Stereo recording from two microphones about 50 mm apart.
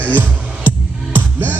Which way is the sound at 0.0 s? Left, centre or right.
Right.